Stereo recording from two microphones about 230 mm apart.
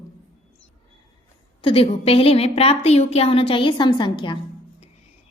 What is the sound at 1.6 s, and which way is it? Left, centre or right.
A woman's voice, left.